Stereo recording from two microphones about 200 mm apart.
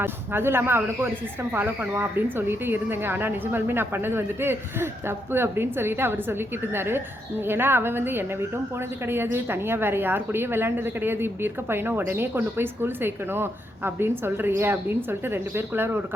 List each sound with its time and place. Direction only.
0.0 s a woman's voice: 10° right (ahead or behind)